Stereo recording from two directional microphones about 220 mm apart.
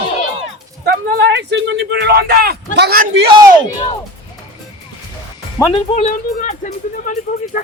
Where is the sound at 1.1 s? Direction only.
50° right (ahead or behind).